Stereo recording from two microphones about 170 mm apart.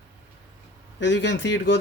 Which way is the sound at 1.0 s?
90° left.